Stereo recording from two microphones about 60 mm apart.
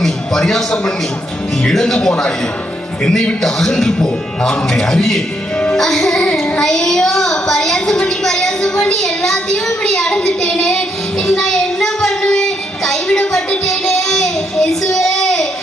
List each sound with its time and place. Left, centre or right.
0.0 s a man's voice: centre
3.4 s a child's voice: centre
12.2 s child singing: centre
13.1 s music: centre
13.7 s child singing: centre